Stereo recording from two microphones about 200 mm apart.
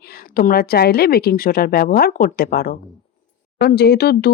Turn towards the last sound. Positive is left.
turn(degrees=55)  # may be behind; listen again after turning